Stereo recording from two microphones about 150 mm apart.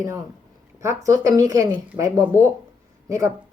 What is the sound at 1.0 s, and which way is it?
Speech, 20° right (ahead or behind).